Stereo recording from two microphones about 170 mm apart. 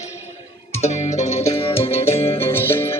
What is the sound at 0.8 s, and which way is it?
Music, 40° left (ahead or behind).